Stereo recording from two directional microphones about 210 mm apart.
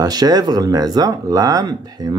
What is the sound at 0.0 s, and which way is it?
Speech, 20° right (ahead or behind).